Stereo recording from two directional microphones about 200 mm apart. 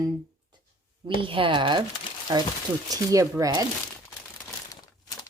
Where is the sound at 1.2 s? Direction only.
25° right (ahead or behind).